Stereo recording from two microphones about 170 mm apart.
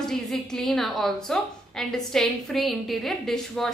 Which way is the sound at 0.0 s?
5° left (ahead or behind).